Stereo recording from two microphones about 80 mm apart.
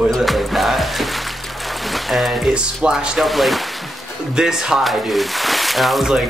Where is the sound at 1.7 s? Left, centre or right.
Centre.